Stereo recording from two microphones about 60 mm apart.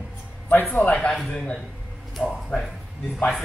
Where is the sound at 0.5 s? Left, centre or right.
Left.